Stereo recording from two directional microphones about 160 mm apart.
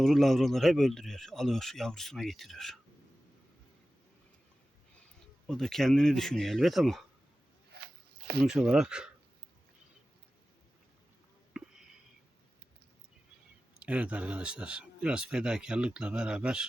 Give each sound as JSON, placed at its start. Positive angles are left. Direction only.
{"t": 0.0, "sound": "speech", "side_deg": 0}
{"t": 5.5, "sound": "speech", "side_deg": 0}
{"t": 7.7, "sound": "zipper", "side_deg": -80}
{"t": 8.4, "sound": "speech", "side_deg": -5}
{"t": 13.7, "sound": "speech", "side_deg": -10}